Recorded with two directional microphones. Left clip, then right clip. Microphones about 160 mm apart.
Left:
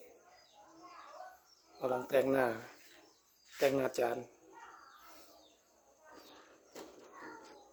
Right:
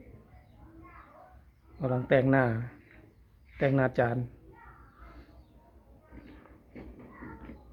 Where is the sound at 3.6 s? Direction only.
15° left (ahead or behind).